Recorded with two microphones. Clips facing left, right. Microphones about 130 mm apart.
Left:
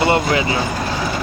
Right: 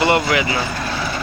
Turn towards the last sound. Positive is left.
turn(degrees=25)  # may be behind; listen again after turning